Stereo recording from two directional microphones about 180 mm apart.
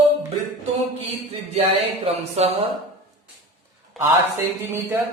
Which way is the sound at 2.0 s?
35° right (ahead or behind).